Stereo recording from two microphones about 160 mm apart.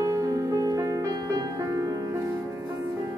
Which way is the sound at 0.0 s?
20° right (ahead or behind).